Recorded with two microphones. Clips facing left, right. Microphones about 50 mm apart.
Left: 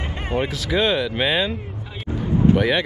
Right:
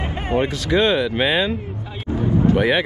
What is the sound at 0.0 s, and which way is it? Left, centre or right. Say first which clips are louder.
Speech: right 3 dB; centre.